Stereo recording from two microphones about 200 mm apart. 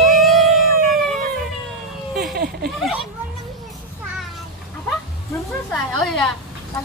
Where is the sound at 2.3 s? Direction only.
50° right (ahead or behind).